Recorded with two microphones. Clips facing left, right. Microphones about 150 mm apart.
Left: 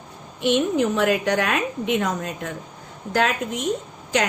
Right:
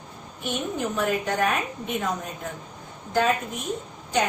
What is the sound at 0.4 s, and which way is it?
A woman's voice, 90° left.